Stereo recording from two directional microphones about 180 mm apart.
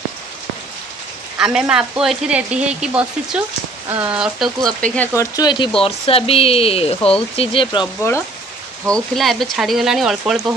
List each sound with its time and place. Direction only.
1.4 s speech: 5° right (ahead or behind)
4.6 s speech: 5° left (ahead or behind); by 7.9 s 25° left (ahead or behind)
8.8 s speech: 5° left (ahead or behind)